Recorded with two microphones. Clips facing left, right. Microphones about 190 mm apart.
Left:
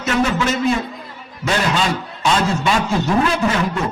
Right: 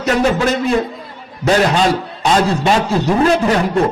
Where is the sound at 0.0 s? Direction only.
35° right (ahead or behind).